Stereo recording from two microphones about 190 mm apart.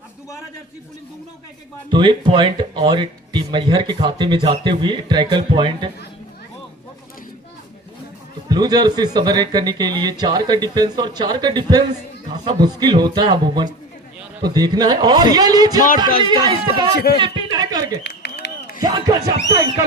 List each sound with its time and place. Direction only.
1.9 s a man's voice: 25° right (ahead or behind)
8.4 s a man's voice: 20° right (ahead or behind)
16.9 s a man's voice: 55° left (ahead or behind)
17.2 s a sound: 25° right (ahead or behind)
18.0 s a sound: 60° left (ahead or behind)
18.8 s a man's voice: 20° right (ahead or behind)